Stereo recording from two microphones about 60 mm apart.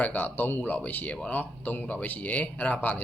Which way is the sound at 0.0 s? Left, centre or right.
Left.